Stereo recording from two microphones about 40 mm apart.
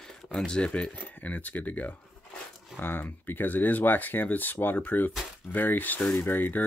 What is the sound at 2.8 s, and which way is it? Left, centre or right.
Speech, left.